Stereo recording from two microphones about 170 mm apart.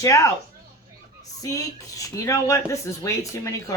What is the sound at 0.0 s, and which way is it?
Speech, 20° left (ahead or behind).